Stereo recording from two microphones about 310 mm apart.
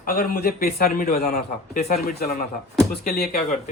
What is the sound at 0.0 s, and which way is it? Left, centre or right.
Speech, left.